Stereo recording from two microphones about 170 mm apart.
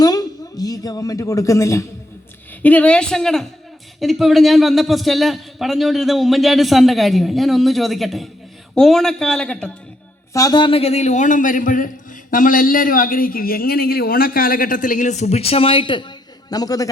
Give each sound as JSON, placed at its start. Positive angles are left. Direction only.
{"t": 0.0, "sound": "a woman's voice", "side_deg": 20}
{"t": 10.3, "sound": "a man's voice", "side_deg": 25}